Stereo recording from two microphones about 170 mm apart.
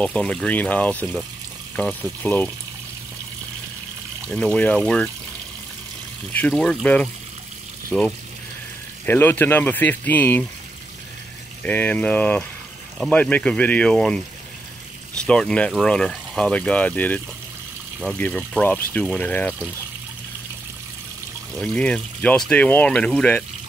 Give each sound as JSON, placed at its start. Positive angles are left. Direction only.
{"t": 0.0, "sound": "speech", "side_deg": 5}
{"t": 4.3, "sound": "speech", "side_deg": 5}
{"t": 6.5, "sound": "speech", "side_deg": 5}
{"t": 9.0, "sound": "speech", "side_deg": 10}
{"t": 11.6, "sound": "speech", "side_deg": 10}
{"t": 21.5, "sound": "speech", "side_deg": 5}